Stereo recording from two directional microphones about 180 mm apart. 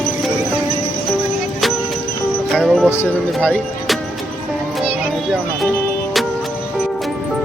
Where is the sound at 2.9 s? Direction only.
10° left (ahead or behind).